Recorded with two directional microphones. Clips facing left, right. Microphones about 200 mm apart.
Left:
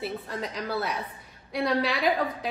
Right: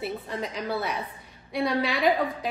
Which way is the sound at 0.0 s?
Centre (ahead or behind).